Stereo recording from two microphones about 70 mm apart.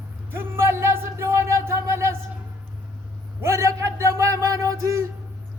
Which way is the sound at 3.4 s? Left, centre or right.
Right.